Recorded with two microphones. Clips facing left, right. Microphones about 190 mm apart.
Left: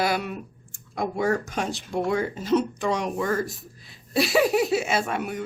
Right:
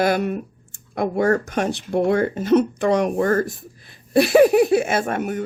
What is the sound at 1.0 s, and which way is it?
Speech, 60° right (ahead or behind).